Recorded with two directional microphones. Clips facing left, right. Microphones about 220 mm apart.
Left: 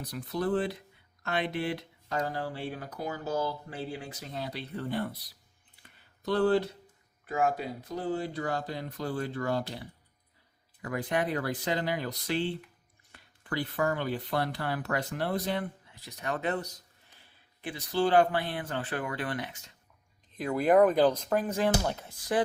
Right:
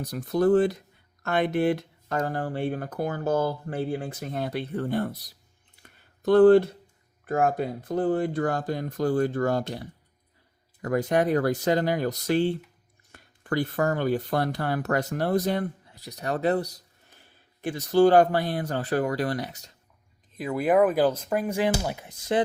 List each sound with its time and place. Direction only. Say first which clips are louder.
0.0 s speech: right 9 dB; 45° right (ahead or behind)
5.8 s a sound: right 9 dB; 50° right (ahead or behind)
7.3 s speech: right 5 dB; 50° right (ahead or behind)
10.8 s speech: right 7 dB; 45° right (ahead or behind)
20.3 s speech: right 1 dB; 5° right (ahead or behind); by 22.4 s 20° right (ahead or behind)